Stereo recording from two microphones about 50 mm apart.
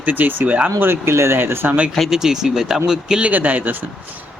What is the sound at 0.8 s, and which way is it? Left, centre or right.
Speech, right.